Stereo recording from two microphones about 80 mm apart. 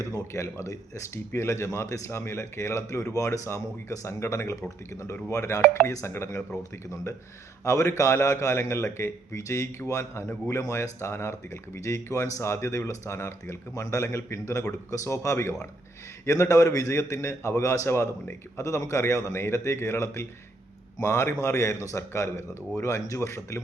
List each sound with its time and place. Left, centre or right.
0.0 s speech: left